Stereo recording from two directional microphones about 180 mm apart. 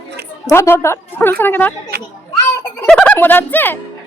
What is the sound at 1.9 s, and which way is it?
Speech, 60° right (ahead or behind).